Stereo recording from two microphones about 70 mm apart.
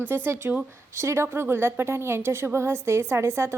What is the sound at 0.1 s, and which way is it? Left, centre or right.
A woman's voice, right.